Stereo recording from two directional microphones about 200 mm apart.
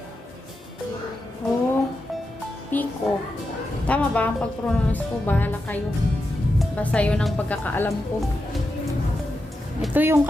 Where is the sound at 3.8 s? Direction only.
5° left (ahead or behind).